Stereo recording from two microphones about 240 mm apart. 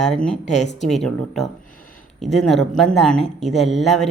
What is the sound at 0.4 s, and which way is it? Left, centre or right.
Speech, left.